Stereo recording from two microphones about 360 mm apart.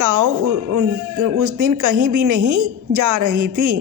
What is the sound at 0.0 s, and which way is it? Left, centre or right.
Speech, right.